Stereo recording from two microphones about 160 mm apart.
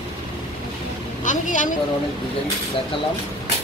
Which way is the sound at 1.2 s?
50° left (ahead or behind).